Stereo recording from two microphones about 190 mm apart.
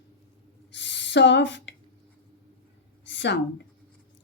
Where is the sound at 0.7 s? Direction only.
70° left (ahead or behind).